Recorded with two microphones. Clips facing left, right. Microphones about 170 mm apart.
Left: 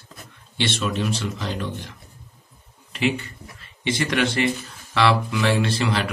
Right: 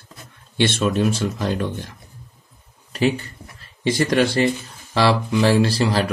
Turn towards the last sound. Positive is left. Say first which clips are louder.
# right 4 dB
turn(degrees=-35)  # may be behind; listen again after turning